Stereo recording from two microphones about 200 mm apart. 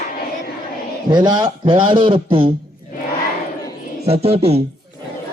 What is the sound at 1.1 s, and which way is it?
A man's voice, 20° right (ahead or behind).